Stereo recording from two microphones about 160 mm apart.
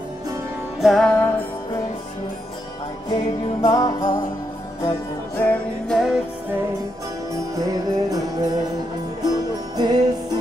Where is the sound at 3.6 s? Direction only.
25° left (ahead or behind).